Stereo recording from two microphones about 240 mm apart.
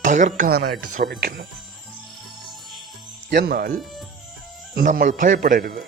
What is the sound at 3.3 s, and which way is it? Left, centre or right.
Speech, right.